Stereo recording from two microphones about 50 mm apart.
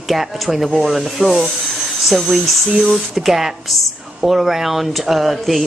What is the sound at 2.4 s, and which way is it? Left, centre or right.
Speech, centre.